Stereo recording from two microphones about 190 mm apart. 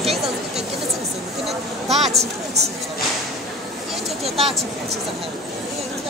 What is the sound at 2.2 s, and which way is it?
Speech, 35° right (ahead or behind).